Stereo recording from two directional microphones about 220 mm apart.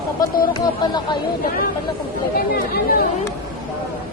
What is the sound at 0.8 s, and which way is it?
Speech, 20° left (ahead or behind).